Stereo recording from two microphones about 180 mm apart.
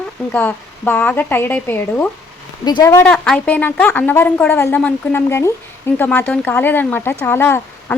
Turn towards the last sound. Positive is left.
turn(degrees=10)  # may be behind; listen again after turning